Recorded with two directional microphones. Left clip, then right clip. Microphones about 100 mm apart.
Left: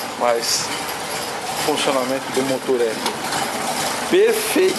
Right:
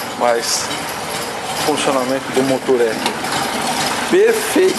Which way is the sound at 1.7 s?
Centre (ahead or behind).